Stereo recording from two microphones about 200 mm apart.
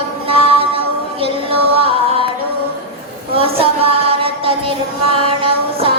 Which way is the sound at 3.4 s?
30° right (ahead or behind).